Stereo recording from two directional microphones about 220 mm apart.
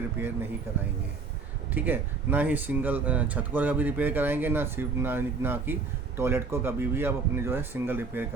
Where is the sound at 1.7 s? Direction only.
10° right (ahead or behind).